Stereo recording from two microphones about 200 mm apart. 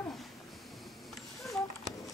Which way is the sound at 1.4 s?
Centre (ahead or behind).